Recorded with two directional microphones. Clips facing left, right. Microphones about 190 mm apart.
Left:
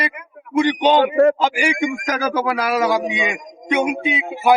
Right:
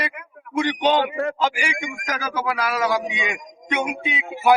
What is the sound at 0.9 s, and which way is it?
Speech, 45° left (ahead or behind).